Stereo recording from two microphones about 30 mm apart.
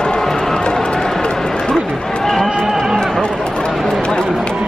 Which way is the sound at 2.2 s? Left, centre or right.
Centre.